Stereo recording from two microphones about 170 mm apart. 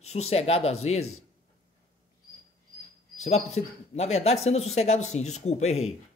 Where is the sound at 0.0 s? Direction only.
40° left (ahead or behind).